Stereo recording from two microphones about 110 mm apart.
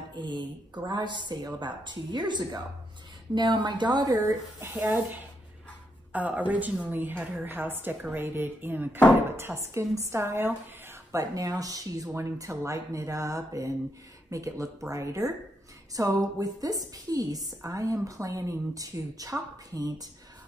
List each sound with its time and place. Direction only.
0.1 s a woman's voice: 45° right (ahead or behind)
4.6 s a woman's voice: 20° right (ahead or behind); by 20.1 s 35° right (ahead or behind)